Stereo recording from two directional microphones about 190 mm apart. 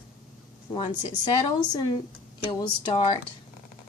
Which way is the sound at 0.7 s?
25° left (ahead or behind).